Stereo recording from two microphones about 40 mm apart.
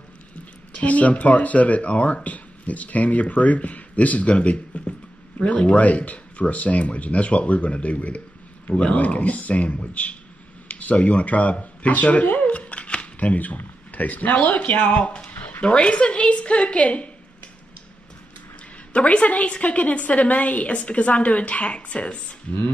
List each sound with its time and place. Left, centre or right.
0.7 s speech: left
10.7 s a sound: left
13.6 s speech: left
15.3 s a sound: left
15.6 s a woman's voice: left
18.9 s speech: left